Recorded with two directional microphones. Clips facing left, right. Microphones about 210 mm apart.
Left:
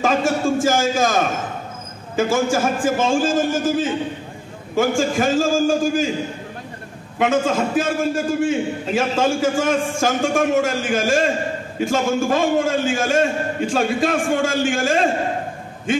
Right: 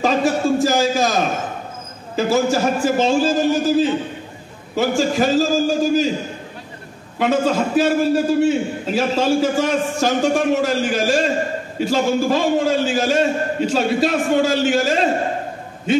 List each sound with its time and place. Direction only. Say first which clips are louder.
0.0 s a sound: right 1 dB; 50° left (ahead or behind)
2.1 s a man's voice: right 1 dB; 50° left (ahead or behind)
7.2 s a man's voice: right 1 dB; 50° left (ahead or behind)